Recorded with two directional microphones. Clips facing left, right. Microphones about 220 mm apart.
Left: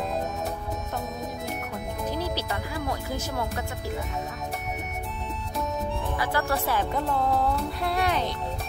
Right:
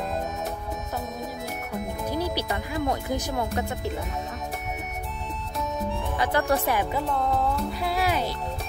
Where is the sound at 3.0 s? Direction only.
15° right (ahead or behind).